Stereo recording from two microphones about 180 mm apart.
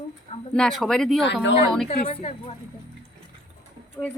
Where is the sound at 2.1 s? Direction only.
35° left (ahead or behind).